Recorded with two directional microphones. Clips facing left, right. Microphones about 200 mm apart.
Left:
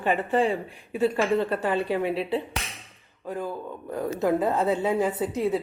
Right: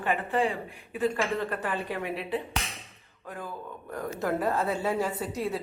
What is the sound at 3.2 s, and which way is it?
Speech, 15° left (ahead or behind).